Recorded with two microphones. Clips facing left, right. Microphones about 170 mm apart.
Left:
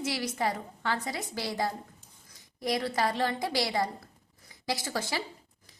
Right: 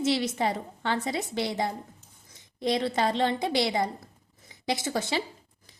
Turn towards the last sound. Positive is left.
turn(degrees=-20)  # may be behind; listen again after turning